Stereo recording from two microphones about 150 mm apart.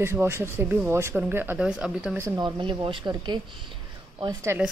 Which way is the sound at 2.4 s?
35° right (ahead or behind).